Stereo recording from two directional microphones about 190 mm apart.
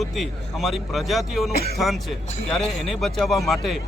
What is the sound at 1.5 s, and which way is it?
Speech, 55° left (ahead or behind).